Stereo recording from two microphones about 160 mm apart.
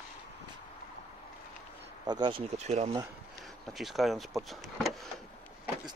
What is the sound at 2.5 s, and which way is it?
Speech, 45° right (ahead or behind).